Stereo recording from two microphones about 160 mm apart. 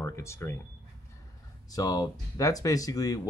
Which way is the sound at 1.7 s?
25° left (ahead or behind).